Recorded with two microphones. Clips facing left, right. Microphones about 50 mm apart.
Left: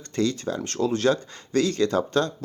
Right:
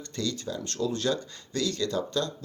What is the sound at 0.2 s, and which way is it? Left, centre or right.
Speech, left.